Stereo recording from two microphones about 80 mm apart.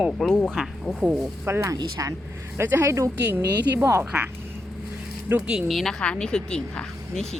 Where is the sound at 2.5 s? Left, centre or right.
Right.